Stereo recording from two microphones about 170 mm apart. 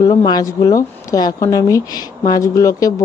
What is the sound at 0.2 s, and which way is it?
Speech, 20° left (ahead or behind).